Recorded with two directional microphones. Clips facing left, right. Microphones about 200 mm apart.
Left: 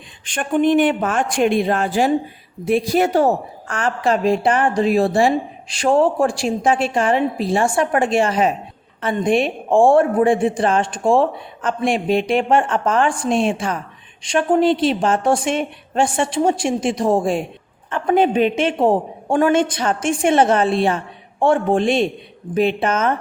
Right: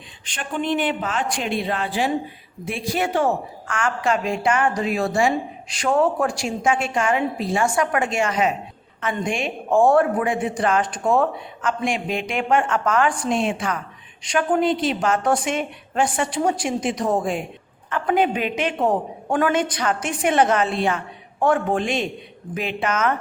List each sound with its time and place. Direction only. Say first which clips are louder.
0.3 s a woman's voice: left 8 dB; 50° left (ahead or behind); by 23.1 s 30° left (ahead or behind)